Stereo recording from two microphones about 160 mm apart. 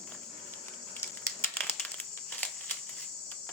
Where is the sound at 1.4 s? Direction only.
10° left (ahead or behind).